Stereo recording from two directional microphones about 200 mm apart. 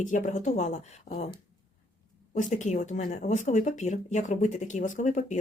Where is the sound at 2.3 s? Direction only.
40° left (ahead or behind).